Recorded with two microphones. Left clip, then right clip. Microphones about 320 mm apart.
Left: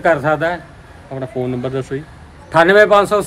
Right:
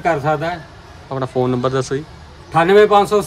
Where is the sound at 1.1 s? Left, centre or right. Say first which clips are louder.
Right 4 dB; centre.